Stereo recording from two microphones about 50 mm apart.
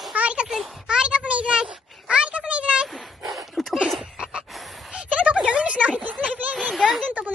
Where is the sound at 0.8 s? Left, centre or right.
Centre.